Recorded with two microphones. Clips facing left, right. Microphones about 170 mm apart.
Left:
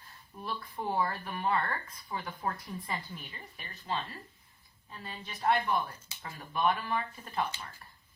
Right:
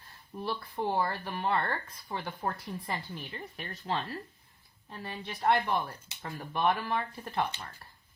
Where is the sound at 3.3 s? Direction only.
60° right (ahead or behind).